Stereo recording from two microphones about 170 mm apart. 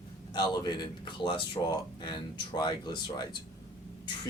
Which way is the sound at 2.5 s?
25° left (ahead or behind).